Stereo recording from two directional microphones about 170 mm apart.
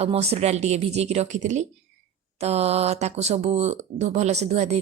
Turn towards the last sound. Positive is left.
turn(degrees=-40)  # may be behind; listen again after turning